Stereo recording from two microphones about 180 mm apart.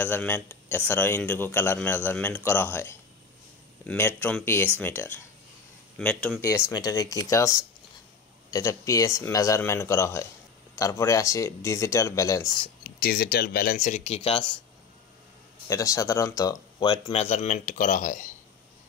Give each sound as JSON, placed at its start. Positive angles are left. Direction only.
{"t": 0.0, "sound": "speech", "side_deg": 10}
{"t": 6.6, "sound": "speech", "side_deg": 20}
{"t": 12.8, "sound": "speech", "side_deg": 55}
{"t": 15.7, "sound": "speech", "side_deg": 20}
{"t": 17.1, "sound": "speech", "side_deg": 35}